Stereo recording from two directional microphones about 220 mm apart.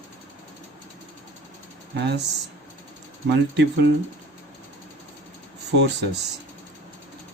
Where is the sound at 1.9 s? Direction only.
50° right (ahead or behind).